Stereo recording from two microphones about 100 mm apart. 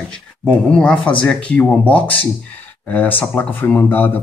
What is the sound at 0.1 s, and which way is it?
Speech, 10° left (ahead or behind).